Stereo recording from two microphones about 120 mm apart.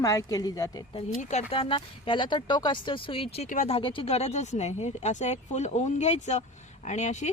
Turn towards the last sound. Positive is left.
turn(degrees=75)  # may be behind; listen again after turning